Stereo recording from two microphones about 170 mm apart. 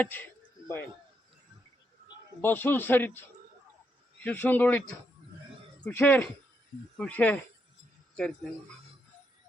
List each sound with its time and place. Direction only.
0.0 s a man's voice: 10° left (ahead or behind)
2.4 s a man's voice: 10° left (ahead or behind)
5.8 s a man's voice: 10° left (ahead or behind)